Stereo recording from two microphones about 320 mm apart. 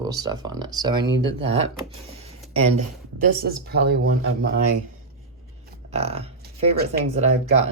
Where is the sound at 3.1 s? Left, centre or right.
Right.